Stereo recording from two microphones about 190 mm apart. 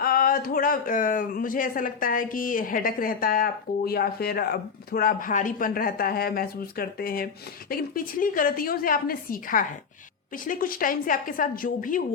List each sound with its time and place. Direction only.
0.0 s speech: 50° left (ahead or behind)